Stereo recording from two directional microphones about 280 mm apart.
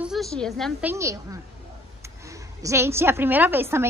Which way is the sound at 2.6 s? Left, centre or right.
Centre.